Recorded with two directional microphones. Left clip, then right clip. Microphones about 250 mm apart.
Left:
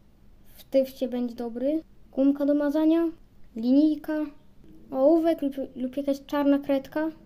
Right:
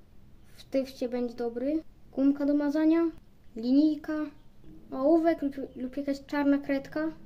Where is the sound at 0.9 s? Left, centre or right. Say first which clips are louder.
Left 2 dB; centre.